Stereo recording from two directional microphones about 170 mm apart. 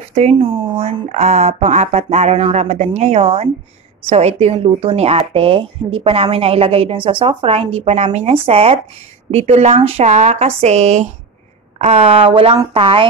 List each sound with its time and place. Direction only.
0.1 s speech: 40° right (ahead or behind)